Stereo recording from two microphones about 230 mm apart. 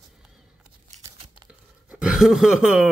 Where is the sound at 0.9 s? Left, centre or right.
Right.